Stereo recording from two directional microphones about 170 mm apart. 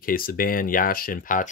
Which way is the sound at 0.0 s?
55° left (ahead or behind).